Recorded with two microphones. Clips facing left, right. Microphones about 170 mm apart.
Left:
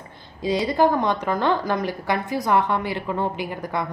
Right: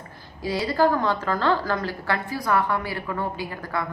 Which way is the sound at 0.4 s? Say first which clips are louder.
Left 2 dB; 20° left (ahead or behind).